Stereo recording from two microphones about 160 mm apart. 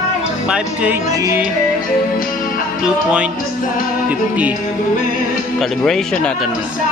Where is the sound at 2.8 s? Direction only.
5° right (ahead or behind).